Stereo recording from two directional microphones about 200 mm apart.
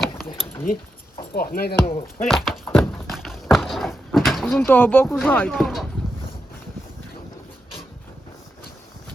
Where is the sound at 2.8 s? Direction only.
Centre (ahead or behind).